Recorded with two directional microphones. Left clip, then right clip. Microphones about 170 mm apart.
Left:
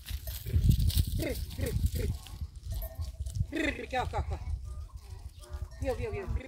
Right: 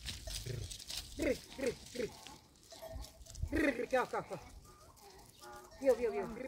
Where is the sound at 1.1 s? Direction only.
65° left (ahead or behind).